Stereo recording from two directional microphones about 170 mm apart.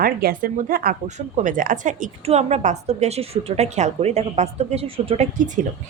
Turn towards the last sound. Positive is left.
turn(degrees=-45)  # may be behind; listen again after turning